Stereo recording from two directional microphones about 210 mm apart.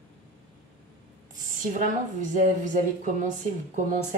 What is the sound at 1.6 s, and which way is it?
Speech, 35° right (ahead or behind).